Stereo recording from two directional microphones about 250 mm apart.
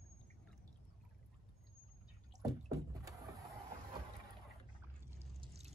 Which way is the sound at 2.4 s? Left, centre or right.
Centre.